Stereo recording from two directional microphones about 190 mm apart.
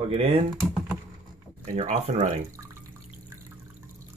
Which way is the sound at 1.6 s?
35° right (ahead or behind).